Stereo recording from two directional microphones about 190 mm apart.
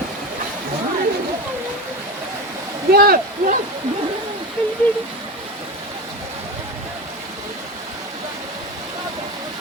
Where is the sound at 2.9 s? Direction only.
50° right (ahead or behind).